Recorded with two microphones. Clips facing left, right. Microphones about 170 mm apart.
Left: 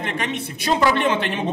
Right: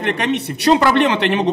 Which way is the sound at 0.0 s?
70° right (ahead or behind).